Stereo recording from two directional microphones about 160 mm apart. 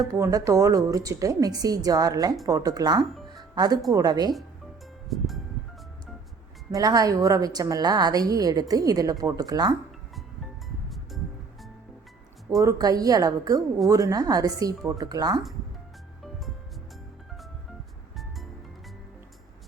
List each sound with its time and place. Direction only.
0.1 s a woman's voice: 20° right (ahead or behind)
3.3 s music: 25° right (ahead or behind)
3.9 s a woman's voice: 25° right (ahead or behind)
5.0 s music: centre (ahead or behind)
6.7 s a woman's voice: 20° right (ahead or behind)
10.8 s music: centre (ahead or behind)
12.6 s a woman's voice: 20° right (ahead or behind)